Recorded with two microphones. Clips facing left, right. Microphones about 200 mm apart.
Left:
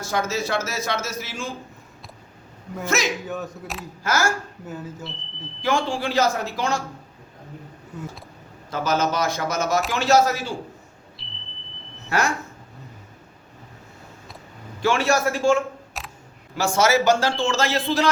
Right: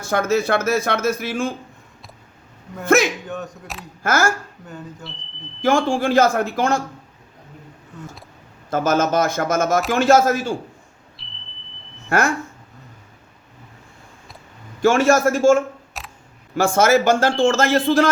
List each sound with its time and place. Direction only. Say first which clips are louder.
0.0 s speech: right 6 dB; 55° right (ahead or behind)
2.8 s a man's voice: right 8 dB; 55° right (ahead or behind)
3.2 s speech: even; centre (ahead or behind)
4.0 s a man's voice: right 4 dB; 55° right (ahead or behind)
4.6 s speech: left 2 dB; 5° left (ahead or behind)
5.6 s a man's voice: right 6 dB; 45° right (ahead or behind)
8.7 s a man's voice: right 5 dB; 50° right (ahead or behind)
11.2 s smoke detector: left 1 dB; centre (ahead or behind)
12.0 s speech: right 4 dB; 55° right (ahead or behind)
14.8 s a man's voice: right 6 dB; 50° right (ahead or behind)
16.0 s camera: right 1 dB; centre (ahead or behind)
16.6 s a man's voice: right 4 dB; 50° right (ahead or behind)